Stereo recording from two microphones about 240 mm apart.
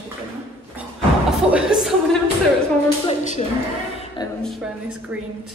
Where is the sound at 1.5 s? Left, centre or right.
Centre.